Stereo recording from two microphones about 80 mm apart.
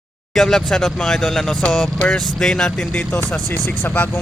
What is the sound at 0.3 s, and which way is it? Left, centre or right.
Speech, centre.